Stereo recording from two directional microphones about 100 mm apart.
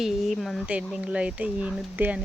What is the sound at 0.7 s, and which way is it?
Speech, 10° right (ahead or behind).